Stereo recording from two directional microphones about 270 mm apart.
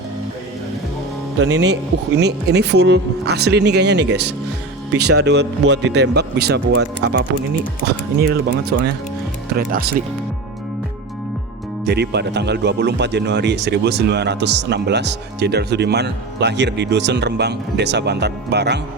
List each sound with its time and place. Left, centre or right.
1.4 s speech: right
8.3 s speech: right
11.9 s speech: right